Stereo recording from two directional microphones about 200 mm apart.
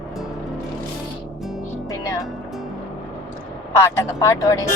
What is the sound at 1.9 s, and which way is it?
Music, 15° left (ahead or behind).